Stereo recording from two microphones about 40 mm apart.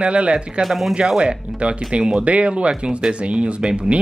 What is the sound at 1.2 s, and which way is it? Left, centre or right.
Speech, right.